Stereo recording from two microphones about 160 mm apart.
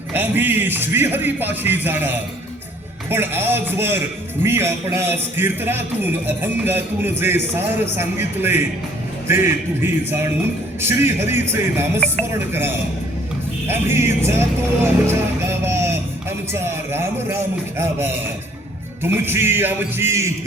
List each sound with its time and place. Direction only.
0.1 s a man's voice: 10° right (ahead or behind)
15.0 s music: 15° right (ahead or behind)
16.5 s a man's voice: 15° right (ahead or behind)